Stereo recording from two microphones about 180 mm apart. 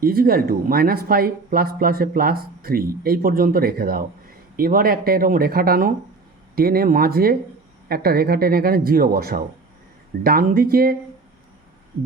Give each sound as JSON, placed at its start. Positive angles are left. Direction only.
{"t": 0.0, "sound": "speech", "side_deg": -55}